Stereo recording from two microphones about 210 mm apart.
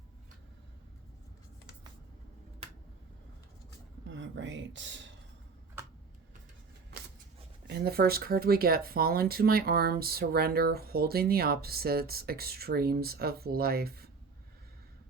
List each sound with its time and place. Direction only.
4.1 s speech: 60° right (ahead or behind)
5.8 s tick-tock: 15° right (ahead or behind)
7.7 s speech: 45° right (ahead or behind)